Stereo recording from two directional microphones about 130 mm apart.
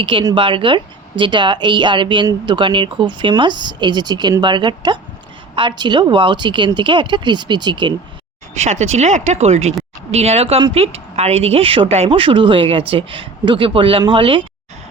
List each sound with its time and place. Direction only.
0.0 s speech: 40° right (ahead or behind)
8.5 s speech: 60° right (ahead or behind); by 14.4 s 40° right (ahead or behind)